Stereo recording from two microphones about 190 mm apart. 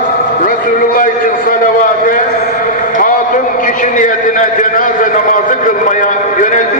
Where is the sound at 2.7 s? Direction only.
45° left (ahead or behind).